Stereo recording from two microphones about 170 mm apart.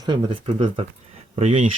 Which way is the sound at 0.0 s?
30° right (ahead or behind).